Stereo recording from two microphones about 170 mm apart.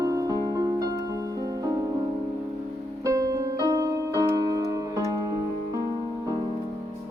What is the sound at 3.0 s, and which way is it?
Music, 20° right (ahead or behind).